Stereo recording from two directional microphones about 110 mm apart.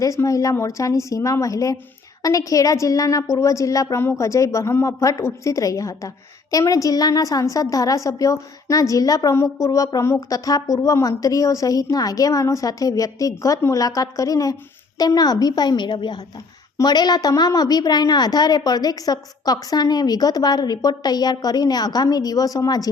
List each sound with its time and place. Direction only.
0.0 s a woman's voice: 30° left (ahead or behind)